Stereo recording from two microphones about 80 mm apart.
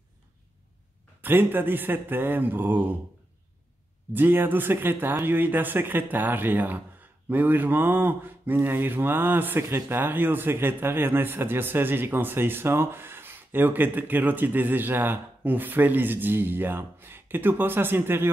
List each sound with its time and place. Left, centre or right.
1.2 s speech: right
4.1 s speech: right